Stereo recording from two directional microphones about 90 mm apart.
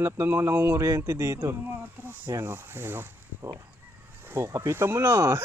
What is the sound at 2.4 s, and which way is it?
Speech, 25° right (ahead or behind).